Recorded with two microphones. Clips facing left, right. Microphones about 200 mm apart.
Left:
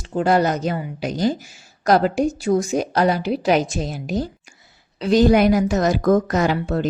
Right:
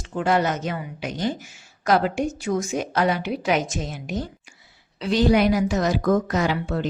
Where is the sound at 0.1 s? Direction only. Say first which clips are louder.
Left 4 dB; 35° left (ahead or behind).